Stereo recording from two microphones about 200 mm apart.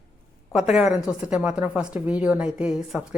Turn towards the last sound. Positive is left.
turn(degrees=-5)  # may be behind; listen again after turning